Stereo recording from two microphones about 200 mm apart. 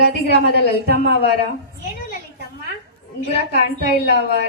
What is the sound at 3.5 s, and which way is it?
Speech, 55° right (ahead or behind).